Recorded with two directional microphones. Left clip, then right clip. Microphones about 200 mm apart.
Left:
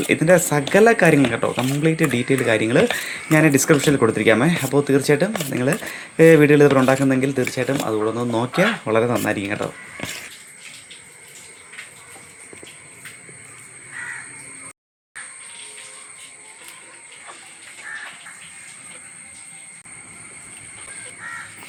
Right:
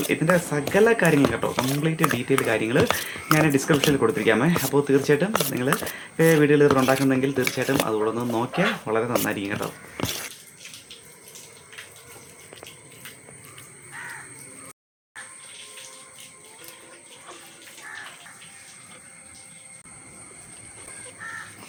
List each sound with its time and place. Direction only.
0.1 s speech: 15° left (ahead or behind)